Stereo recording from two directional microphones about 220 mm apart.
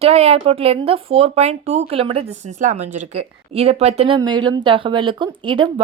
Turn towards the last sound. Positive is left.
turn(degrees=-20)  # may be behind; listen again after turning